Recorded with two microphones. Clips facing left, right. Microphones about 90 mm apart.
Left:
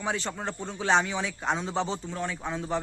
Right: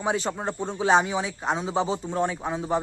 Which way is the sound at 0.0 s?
20° right (ahead or behind).